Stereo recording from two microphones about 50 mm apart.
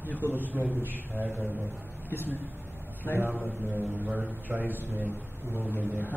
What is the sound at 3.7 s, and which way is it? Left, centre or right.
A man's voice, right.